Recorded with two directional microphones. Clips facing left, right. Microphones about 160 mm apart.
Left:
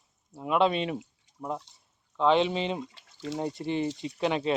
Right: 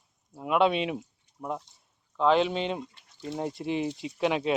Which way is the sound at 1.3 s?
90° left.